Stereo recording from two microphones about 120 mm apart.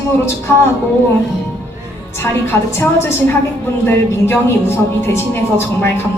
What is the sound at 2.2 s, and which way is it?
Speech, 20° left (ahead or behind).